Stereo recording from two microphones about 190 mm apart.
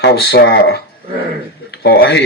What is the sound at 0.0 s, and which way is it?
A man's voice, 60° left (ahead or behind).